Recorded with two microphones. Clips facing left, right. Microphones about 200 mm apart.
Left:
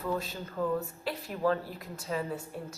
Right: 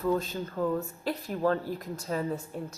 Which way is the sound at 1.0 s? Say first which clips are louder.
Right 2 dB; 40° right (ahead or behind).